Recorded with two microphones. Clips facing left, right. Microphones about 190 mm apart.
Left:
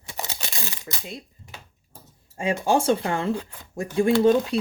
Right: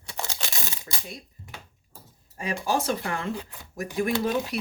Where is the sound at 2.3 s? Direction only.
25° left (ahead or behind).